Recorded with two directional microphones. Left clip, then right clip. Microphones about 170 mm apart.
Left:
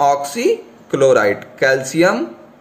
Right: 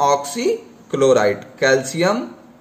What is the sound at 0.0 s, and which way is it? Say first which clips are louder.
A man's voice: left 2 dB; 15° left (ahead or behind).